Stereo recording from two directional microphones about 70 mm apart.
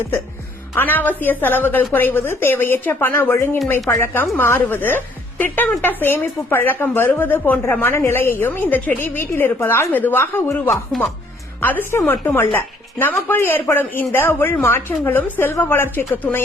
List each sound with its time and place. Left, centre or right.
0.8 s a woman's voice: left
3.3 s speech: left
3.8 s a woman's voice: left
11.6 s a woman's voice: left